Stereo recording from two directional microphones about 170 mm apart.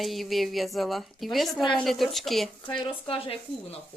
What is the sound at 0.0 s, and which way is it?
Speech, centre (ahead or behind).